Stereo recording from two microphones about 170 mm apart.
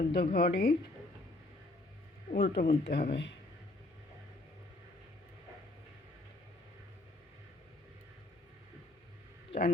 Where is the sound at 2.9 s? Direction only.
75° left (ahead or behind).